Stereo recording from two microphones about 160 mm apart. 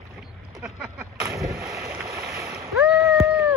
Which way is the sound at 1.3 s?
20° right (ahead or behind).